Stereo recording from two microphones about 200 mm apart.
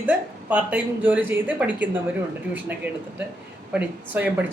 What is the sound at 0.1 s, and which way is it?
A man's voice, 5° right (ahead or behind).